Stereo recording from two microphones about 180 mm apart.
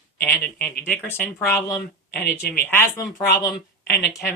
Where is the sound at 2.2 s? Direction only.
60° left (ahead or behind).